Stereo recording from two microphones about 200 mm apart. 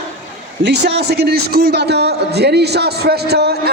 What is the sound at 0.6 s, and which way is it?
A man's voice, 55° right (ahead or behind).